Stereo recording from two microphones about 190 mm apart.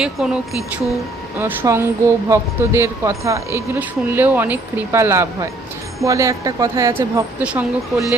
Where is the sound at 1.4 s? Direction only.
10° right (ahead or behind).